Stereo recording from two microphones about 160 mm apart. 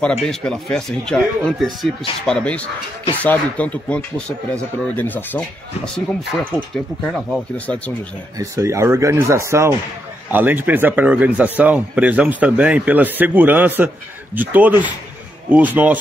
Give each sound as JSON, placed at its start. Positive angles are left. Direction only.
{"t": 0.2, "sound": "speech", "side_deg": 5}
{"t": 8.4, "sound": "speech", "side_deg": -20}